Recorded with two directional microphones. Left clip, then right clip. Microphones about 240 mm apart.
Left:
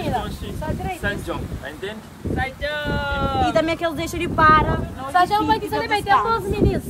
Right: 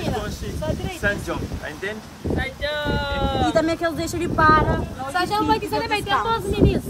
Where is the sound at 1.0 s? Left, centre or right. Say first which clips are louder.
Right 5 dB; centre.